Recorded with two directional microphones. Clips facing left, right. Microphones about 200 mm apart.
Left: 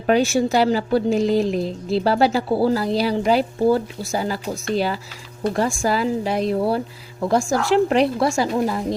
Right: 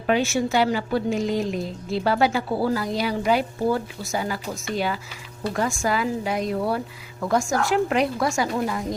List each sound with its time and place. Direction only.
0.1 s a woman's voice: 35° left (ahead or behind)